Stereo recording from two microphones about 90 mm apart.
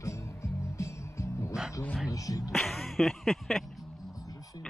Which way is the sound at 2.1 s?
40° left (ahead or behind).